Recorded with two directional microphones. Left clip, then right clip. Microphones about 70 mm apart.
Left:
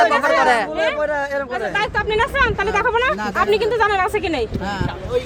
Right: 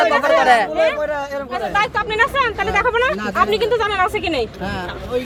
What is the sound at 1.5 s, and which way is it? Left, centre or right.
Speech, left.